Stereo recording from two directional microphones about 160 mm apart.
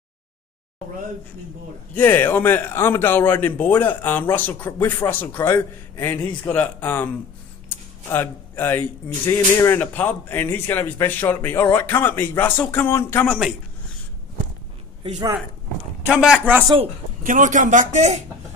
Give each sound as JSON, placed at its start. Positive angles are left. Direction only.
{"t": 2.0, "sound": "speech", "side_deg": 15}
{"t": 8.1, "sound": "speech", "side_deg": 15}
{"t": 16.1, "sound": "speech", "side_deg": -5}
{"t": 16.6, "sound": "speech", "side_deg": -35}
{"t": 17.2, "sound": "a man's voice", "side_deg": -55}